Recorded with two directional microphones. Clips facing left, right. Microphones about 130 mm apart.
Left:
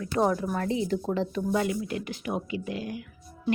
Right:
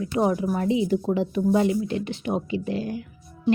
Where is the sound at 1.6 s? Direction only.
25° right (ahead or behind).